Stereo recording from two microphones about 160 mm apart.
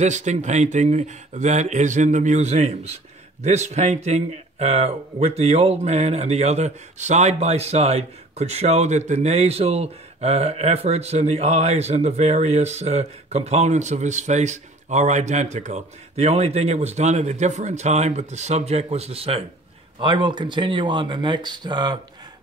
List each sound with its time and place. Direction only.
0.0 s speech: 45° right (ahead or behind); by 21.9 s 25° right (ahead or behind)